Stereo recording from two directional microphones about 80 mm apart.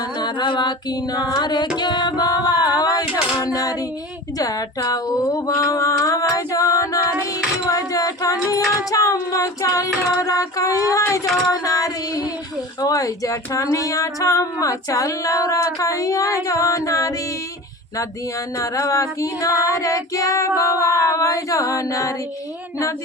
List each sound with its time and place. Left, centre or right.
0.2 s music: left
1.8 s singing: left
3.4 s speech: left
4.4 s a sound: left
7.8 s female singing: left
8.4 s speech: left
18.5 s speech: left